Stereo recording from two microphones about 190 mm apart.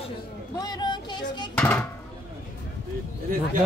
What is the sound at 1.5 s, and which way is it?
Speech, 10° left (ahead or behind).